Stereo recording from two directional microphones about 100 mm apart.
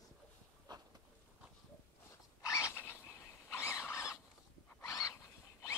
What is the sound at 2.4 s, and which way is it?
Zipper, 30° left (ahead or behind).